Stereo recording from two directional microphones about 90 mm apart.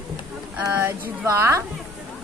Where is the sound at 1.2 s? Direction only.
35° right (ahead or behind).